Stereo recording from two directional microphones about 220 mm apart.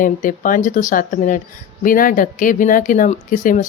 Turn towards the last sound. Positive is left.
turn(degrees=35)  # may be behind; listen again after turning